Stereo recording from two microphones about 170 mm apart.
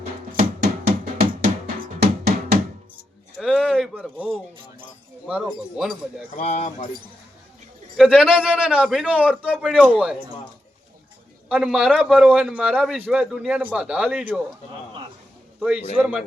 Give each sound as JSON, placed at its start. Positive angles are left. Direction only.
{"t": 0.3, "sound": "music", "side_deg": -70}
{"t": 3.3, "sound": "a sound", "side_deg": -5}
{"t": 5.3, "sound": "a man's voice", "side_deg": -5}
{"t": 6.3, "sound": "speech", "side_deg": 45}
{"t": 7.9, "sound": "a man's voice", "side_deg": 0}
{"t": 11.4, "sound": "a man's voice", "side_deg": -5}
{"t": 15.6, "sound": "a man's voice", "side_deg": -5}